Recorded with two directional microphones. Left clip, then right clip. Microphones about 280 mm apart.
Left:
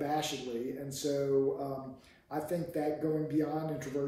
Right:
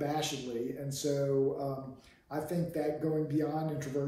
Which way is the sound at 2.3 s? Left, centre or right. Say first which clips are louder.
Even; centre.